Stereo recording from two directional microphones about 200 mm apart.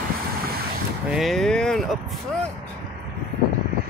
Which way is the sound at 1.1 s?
Centre (ahead or behind).